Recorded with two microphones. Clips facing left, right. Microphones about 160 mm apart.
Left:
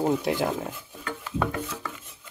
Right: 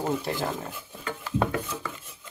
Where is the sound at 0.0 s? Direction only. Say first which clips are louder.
Left 4 dB; 15° left (ahead or behind).